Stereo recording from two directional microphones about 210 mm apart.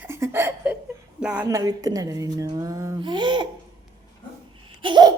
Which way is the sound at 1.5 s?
15° right (ahead or behind).